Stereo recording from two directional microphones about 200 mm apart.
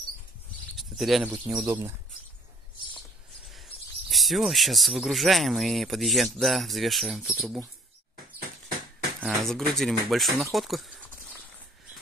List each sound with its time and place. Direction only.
0.7 s speech: centre (ahead or behind)
4.1 s speech: centre (ahead or behind)
8.4 s a sound: 45° right (ahead or behind)
9.2 s speech: centre (ahead or behind)